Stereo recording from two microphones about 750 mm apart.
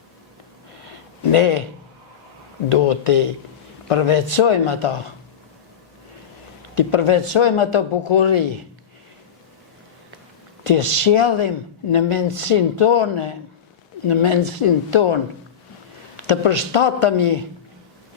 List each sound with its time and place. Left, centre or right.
1.3 s speech: left
2.6 s speech: left
6.7 s a man's voice: left
10.7 s a man's voice: left
16.2 s speech: left